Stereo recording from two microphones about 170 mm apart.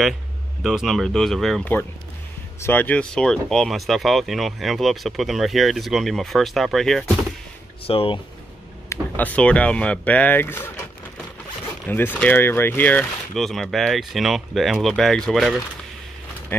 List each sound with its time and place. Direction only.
0.7 s speech: centre (ahead or behind)
7.8 s speech: 35° left (ahead or behind)
8.8 s speech: 15° left (ahead or behind)
11.8 s speech: 10° left (ahead or behind)